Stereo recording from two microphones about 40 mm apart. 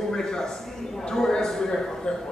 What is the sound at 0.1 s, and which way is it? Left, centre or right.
A man's voice, centre.